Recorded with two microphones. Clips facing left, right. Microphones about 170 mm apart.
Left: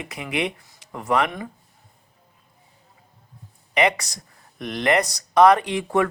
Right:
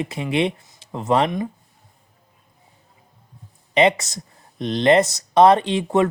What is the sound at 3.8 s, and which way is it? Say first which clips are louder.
Speech: right 4 dB; 25° right (ahead or behind).